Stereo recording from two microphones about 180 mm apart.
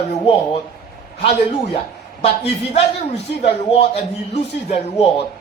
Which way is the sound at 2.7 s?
40° left (ahead or behind).